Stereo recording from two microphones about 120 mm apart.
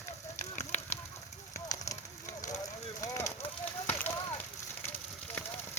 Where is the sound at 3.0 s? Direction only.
25° left (ahead or behind).